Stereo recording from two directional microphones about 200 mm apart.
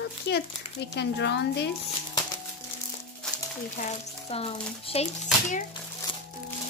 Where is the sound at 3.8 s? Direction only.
30° left (ahead or behind).